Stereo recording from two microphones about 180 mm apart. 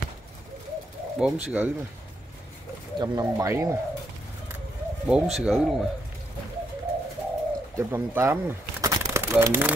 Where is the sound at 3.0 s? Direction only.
20° right (ahead or behind).